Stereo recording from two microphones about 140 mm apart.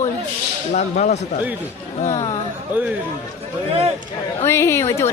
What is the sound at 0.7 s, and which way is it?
Speech, 60° left (ahead or behind).